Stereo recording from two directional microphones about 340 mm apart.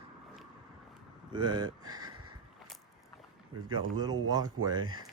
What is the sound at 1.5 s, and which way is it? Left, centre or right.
Speech, right.